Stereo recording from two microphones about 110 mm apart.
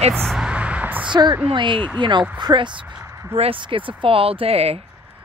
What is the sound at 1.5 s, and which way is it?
Speech, 50° right (ahead or behind).